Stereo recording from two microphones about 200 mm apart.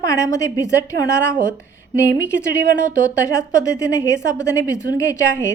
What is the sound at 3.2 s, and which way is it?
A woman's voice, 15° left (ahead or behind).